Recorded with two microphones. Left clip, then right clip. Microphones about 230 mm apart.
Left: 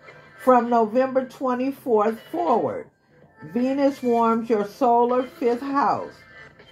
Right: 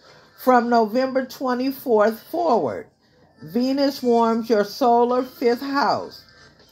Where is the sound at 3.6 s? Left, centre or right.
Right.